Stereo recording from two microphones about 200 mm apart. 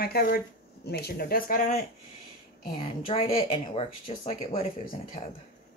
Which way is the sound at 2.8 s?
30° left (ahead or behind).